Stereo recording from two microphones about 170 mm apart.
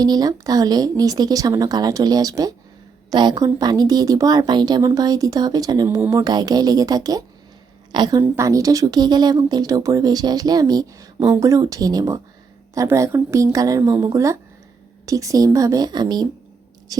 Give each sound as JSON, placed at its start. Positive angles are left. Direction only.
{"t": 0.0, "sound": "speech", "side_deg": -25}